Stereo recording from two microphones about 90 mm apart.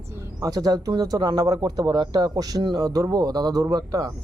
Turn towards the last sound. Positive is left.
turn(degrees=-40)  # may be behind; listen again after turning